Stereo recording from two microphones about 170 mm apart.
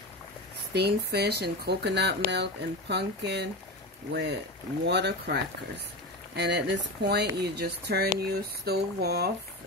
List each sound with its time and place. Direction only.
0.7 s speech: 75° right (ahead or behind)
6.3 s speech: 90° right; by 9.3 s 70° right (ahead or behind)